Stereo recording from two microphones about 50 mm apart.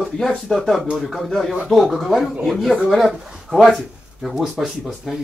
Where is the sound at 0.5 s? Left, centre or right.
Centre.